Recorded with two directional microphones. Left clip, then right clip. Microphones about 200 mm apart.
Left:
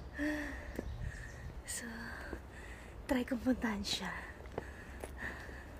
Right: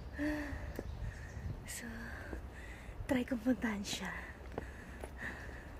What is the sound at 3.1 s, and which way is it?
Speech, 10° left (ahead or behind).